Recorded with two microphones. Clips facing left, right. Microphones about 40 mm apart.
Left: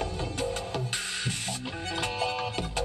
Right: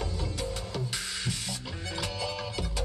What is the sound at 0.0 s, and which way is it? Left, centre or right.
Music, left.